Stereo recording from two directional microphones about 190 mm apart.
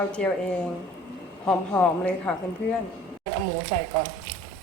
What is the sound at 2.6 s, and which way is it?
Speech, 60° left (ahead or behind).